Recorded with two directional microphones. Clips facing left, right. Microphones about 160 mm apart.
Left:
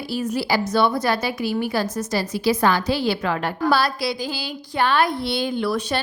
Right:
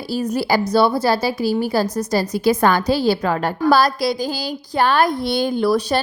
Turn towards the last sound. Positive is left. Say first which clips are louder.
# right 5 dB
turn(degrees=-40)  # may be behind; listen again after turning